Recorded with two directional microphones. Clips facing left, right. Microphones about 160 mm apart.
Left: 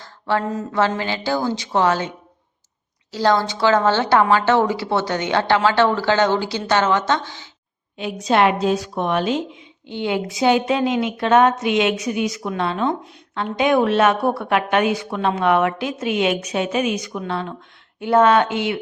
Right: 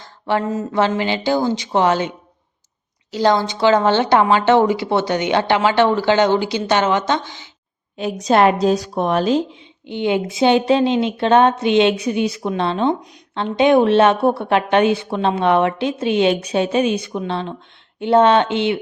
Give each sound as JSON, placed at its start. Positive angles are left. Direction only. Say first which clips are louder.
{"t": 0.0, "sound": "a sound", "louder": "right 2 dB", "side_deg": -20}
{"t": 0.7, "sound": "a woman's voice", "louder": "right 2 dB", "side_deg": -20}
{"t": 7.9, "sound": "speech", "louder": "right 3 dB", "side_deg": -40}
{"t": 9.8, "sound": "a woman's voice", "louder": "right 4 dB", "side_deg": -20}